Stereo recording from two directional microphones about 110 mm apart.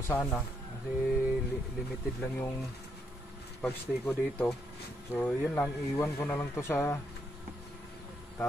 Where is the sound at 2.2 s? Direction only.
20° left (ahead or behind).